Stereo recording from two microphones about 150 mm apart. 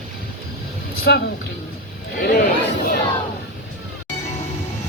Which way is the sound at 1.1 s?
90° left.